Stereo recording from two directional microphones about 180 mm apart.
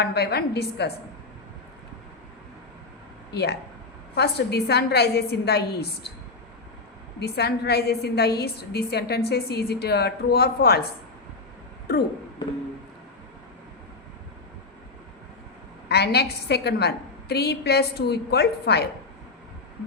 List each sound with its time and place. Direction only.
0.0 s a woman's voice: 65° left (ahead or behind)
3.3 s a woman's voice: 65° left (ahead or behind)
7.2 s a woman's voice: 65° left (ahead or behind)
11.9 s a woman's voice: 60° left (ahead or behind)
15.9 s a woman's voice: 65° left (ahead or behind)